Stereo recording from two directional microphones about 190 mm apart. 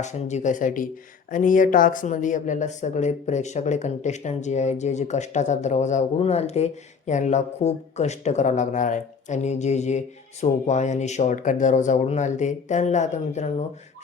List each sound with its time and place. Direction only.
0.0 s speech: 40° left (ahead or behind)